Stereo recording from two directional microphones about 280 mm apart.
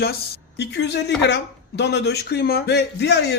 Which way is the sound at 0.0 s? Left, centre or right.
Left.